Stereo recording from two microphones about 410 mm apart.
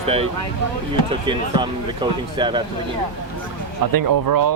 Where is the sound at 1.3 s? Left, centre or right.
Centre.